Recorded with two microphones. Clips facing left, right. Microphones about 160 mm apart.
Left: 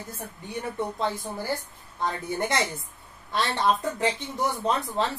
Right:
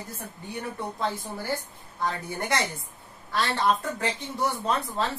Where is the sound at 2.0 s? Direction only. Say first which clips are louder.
Left 2 dB; 20° left (ahead or behind).